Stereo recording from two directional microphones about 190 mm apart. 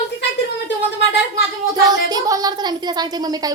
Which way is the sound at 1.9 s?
20° right (ahead or behind).